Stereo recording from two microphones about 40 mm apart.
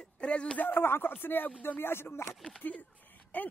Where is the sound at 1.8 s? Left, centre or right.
Left.